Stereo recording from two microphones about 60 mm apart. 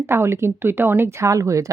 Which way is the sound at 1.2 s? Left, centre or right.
Right.